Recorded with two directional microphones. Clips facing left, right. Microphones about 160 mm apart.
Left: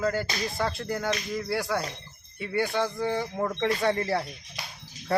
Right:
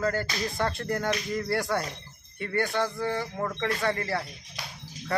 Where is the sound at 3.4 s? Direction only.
20° left (ahead or behind).